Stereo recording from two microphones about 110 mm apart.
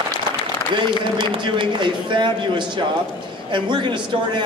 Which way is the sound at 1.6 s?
45° right (ahead or behind).